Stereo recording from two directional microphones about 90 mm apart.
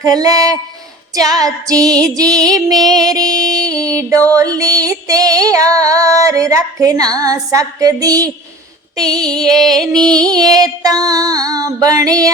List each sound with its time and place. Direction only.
0.0 s music: 45° right (ahead or behind)
1.1 s female singing: 40° right (ahead or behind)
2.5 s music: 45° right (ahead or behind)
4.4 s female singing: 40° right (ahead or behind)
9.2 s music: 5° left (ahead or behind)
10.1 s music: 45° right (ahead or behind)